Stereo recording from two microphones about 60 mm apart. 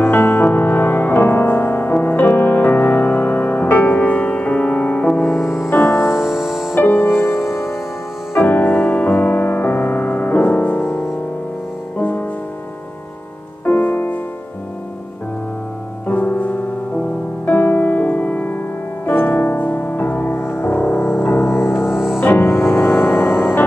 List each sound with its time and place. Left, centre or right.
0.0 s music: left; by 5.3 s centre
5.4 s music: left
5.7 s music: left
6.2 s music: centre
6.7 s music: left
8.4 s music: left
12.0 s music: left
13.7 s music: left
16.1 s piano: left
17.5 s music: left
20.3 s music: left
21.9 s music: centre
22.2 s music: left